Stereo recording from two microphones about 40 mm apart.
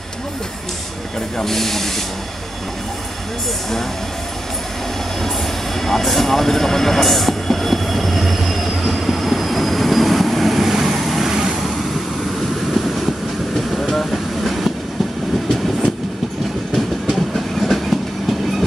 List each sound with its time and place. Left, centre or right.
1.4 s speech: centre
5.8 s train: centre
16.7 s train: centre